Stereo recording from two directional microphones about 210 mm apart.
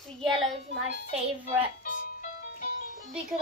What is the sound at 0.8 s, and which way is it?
Speech, 30° right (ahead or behind).